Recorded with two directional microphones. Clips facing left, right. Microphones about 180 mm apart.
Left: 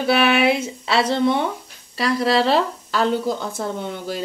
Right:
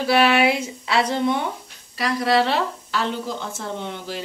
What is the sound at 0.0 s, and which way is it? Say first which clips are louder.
Speech: even; 25° left (ahead or behind).